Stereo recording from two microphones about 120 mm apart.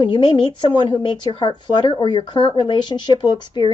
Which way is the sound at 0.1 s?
40° left (ahead or behind).